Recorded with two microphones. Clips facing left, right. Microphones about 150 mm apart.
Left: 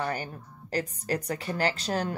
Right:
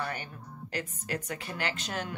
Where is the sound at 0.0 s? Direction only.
35° left (ahead or behind).